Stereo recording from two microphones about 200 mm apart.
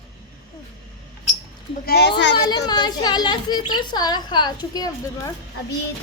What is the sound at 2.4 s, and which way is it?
A woman's voice, 20° left (ahead or behind).